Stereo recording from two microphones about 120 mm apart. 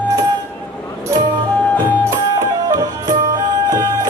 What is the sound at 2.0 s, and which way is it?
Music, 30° right (ahead or behind).